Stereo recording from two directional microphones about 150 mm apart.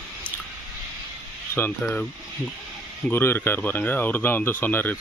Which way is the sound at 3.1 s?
15° left (ahead or behind).